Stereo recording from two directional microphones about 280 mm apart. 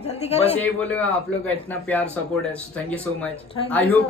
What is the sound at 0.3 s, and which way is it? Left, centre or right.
Speech, left.